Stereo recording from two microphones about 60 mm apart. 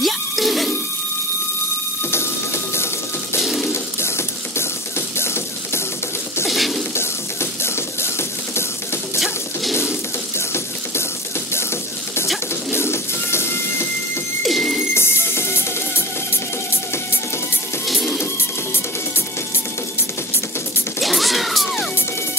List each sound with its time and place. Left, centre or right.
0.0 s music: centre
2.0 s music: left
3.6 s a sound: left
6.4 s a sound: centre
7.0 s music: left
12.7 s music: left
14.4 s a sound: centre
15.0 s music: left
17.8 s music: centre
21.0 s music: centre